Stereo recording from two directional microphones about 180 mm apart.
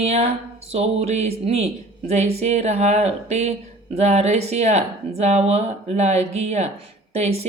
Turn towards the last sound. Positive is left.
turn(degrees=-35)  # may be behind; listen again after turning